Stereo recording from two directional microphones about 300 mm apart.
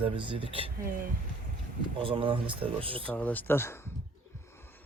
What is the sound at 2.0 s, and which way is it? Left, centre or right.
Speech, centre.